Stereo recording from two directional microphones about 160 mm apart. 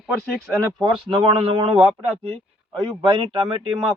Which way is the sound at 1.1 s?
35° right (ahead or behind).